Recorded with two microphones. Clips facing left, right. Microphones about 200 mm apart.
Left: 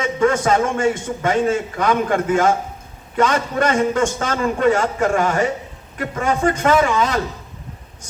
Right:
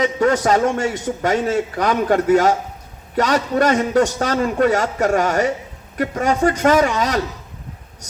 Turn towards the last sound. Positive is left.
turn(degrees=-40)  # may be behind; listen again after turning